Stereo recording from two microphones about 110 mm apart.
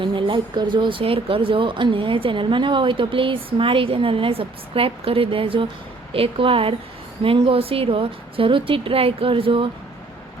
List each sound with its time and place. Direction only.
0.0 s a woman's voice: 50° right (ahead or behind)